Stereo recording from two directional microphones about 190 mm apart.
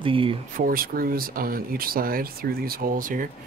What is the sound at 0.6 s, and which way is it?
Speech, 50° right (ahead or behind).